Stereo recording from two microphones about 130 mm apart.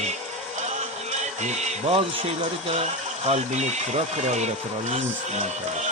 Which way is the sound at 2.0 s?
45° right (ahead or behind).